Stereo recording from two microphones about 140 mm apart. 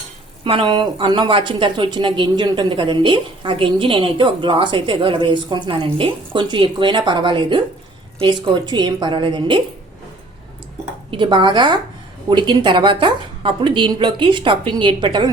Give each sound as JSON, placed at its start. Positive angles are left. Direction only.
{"t": 0.4, "sound": "a woman's voice", "side_deg": -35}
{"t": 11.1, "sound": "a woman's voice", "side_deg": -35}